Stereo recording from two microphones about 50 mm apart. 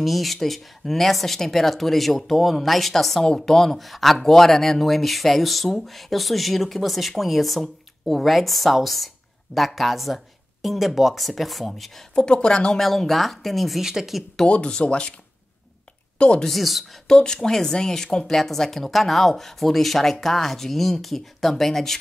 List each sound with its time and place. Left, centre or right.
0.0 s speech: centre
12.2 s speech: centre
12.8 s speech: centre
14.5 s speech: centre
16.2 s speech: centre
16.4 s speech: centre
17.1 s speech: centre